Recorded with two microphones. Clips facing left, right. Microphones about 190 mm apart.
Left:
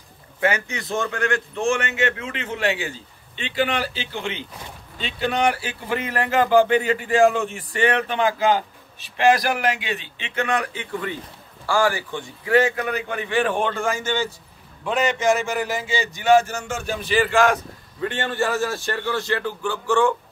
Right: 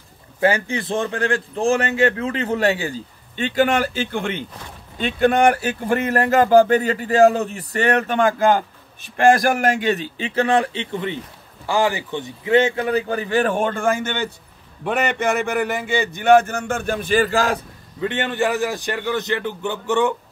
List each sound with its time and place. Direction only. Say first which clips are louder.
0.4 s a man's voice: right 4 dB; 30° right (ahead or behind)
18.0 s a man's voice: right 3 dB; 20° right (ahead or behind)